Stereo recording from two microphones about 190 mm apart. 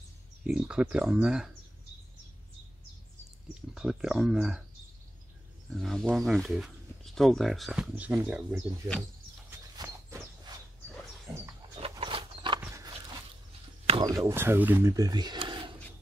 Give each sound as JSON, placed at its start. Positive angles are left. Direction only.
{"t": 0.4, "sound": "speech", "side_deg": -5}
{"t": 3.7, "sound": "speech", "side_deg": -5}
{"t": 5.8, "sound": "speech", "side_deg": 0}
{"t": 9.8, "sound": "walk", "side_deg": -20}
{"t": 11.9, "sound": "a sound", "side_deg": -25}
{"t": 13.8, "sound": "a sound", "side_deg": -25}
{"t": 14.1, "sound": "speech", "side_deg": -15}